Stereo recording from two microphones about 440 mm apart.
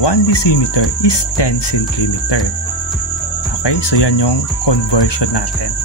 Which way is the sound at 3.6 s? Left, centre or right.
Left.